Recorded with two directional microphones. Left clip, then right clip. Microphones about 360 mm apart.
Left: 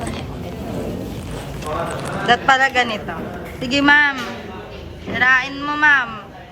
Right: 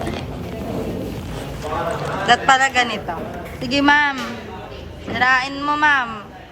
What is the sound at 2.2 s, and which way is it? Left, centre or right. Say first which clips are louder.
Speech: even; centre.